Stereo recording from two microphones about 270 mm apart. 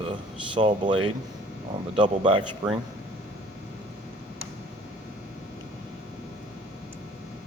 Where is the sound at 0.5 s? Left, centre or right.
Centre.